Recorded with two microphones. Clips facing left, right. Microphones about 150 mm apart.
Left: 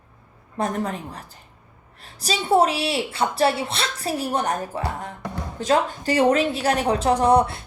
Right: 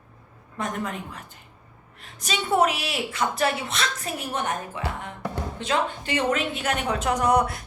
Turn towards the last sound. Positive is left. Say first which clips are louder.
# left 4 dB
turn(degrees=30)  # may be behind; listen again after turning